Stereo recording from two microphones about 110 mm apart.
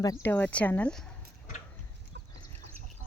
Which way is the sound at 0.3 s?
15° left (ahead or behind).